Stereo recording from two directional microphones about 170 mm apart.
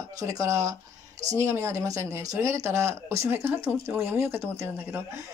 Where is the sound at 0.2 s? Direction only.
20° right (ahead or behind).